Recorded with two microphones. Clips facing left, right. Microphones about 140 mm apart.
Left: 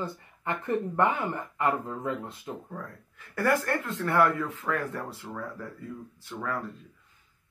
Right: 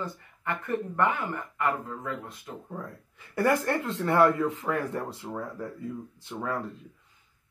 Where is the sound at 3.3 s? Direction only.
20° right (ahead or behind).